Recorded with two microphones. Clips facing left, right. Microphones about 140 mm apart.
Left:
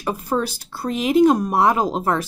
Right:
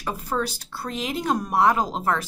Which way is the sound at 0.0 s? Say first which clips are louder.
Left 4 dB; 15° left (ahead or behind).